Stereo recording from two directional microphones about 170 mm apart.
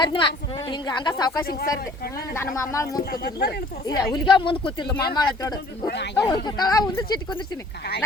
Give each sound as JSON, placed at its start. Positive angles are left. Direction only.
{"t": 0.0, "sound": "a woman's voice", "side_deg": 30}
{"t": 1.5, "sound": "speech", "side_deg": 60}
{"t": 2.3, "sound": "speech", "side_deg": 15}
{"t": 3.0, "sound": "speech", "side_deg": 70}
{"t": 3.8, "sound": "speech", "side_deg": 25}
{"t": 5.8, "sound": "speech", "side_deg": 80}
{"t": 6.1, "sound": "speech", "side_deg": 20}